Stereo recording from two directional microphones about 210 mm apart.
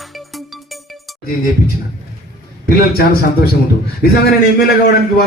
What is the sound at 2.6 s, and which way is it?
Speech, 45° left (ahead or behind).